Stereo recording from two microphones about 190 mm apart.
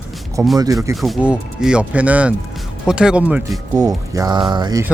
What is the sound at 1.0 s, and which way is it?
Speech, 5° right (ahead or behind).